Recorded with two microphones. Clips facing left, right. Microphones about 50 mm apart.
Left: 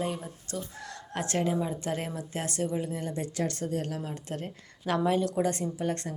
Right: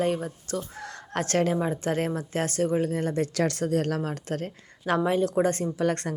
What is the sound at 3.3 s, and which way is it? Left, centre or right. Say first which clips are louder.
Speech: right 6 dB; right.